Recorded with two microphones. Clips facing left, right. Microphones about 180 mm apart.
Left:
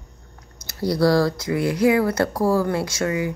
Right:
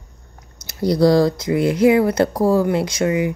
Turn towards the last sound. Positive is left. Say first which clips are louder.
# right 4 dB
turn(degrees=-20)  # may be behind; listen again after turning